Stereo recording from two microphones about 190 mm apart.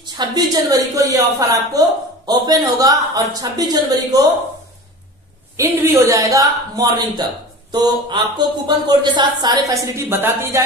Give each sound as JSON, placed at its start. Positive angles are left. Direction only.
{"t": 0.0, "sound": "a woman's voice", "side_deg": -20}
{"t": 5.6, "sound": "a man's voice", "side_deg": -15}